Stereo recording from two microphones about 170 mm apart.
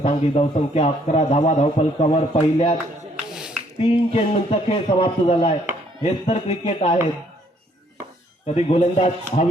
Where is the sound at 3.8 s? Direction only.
35° left (ahead or behind).